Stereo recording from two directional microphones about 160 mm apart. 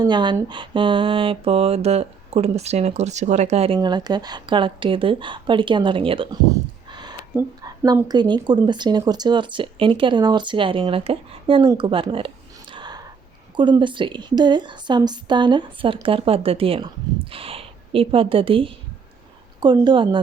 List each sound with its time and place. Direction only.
0.0 s speech: 30° right (ahead or behind)
3.8 s speech: 25° right (ahead or behind)
6.5 s a sound: 25° right (ahead or behind)
8.0 s speech: 25° right (ahead or behind)
12.7 s a sound: 25° right (ahead or behind)
13.6 s speech: 30° right (ahead or behind)